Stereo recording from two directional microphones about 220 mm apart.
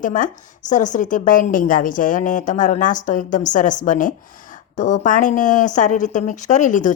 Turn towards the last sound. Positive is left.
turn(degrees=35)  # may be behind; listen again after turning